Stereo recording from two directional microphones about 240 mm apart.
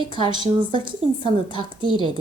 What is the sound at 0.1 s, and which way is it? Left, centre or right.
A woman's voice, centre.